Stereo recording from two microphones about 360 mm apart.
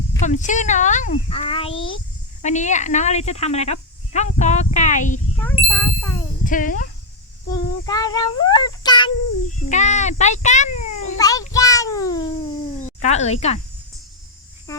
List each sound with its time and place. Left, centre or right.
0.3 s speech: centre
5.4 s speech: centre
6.4 s speech: left
7.5 s child singing: centre
9.6 s speech: centre